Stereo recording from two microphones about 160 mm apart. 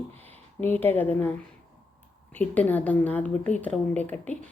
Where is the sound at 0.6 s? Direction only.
10° left (ahead or behind).